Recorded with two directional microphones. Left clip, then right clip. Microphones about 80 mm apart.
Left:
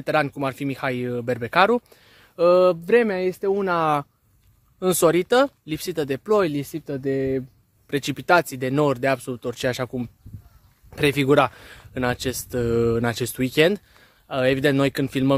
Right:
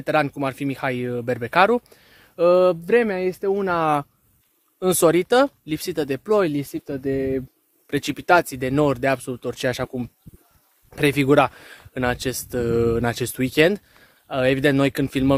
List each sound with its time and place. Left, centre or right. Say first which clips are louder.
0.0 s speech: right 1 dB; centre
4.7 s speech: right 1 dB; centre
5.7 s speech: right 1 dB; centre
7.9 s speech: right 1 dB; centre